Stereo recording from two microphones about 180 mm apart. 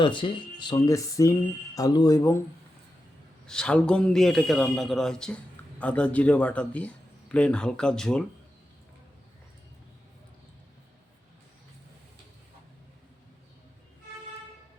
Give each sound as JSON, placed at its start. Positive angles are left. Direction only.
{"t": 0.0, "sound": "speech", "side_deg": 25}
{"t": 3.4, "sound": "a man's voice", "side_deg": 5}